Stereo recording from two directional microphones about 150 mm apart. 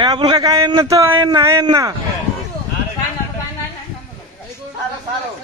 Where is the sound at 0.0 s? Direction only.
25° right (ahead or behind).